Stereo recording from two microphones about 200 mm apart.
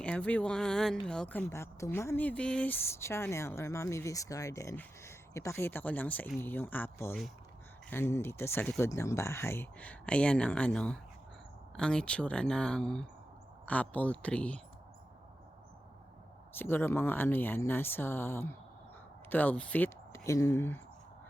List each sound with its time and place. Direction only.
0.0 s speech: 5° left (ahead or behind)
16.6 s speech: 10° left (ahead or behind)